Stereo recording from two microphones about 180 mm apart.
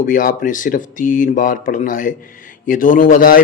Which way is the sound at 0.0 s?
50° left (ahead or behind).